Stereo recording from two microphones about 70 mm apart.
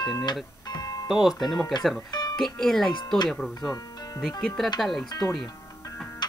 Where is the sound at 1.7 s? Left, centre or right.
Left.